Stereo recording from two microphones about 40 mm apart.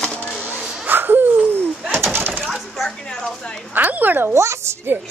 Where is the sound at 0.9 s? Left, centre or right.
Right.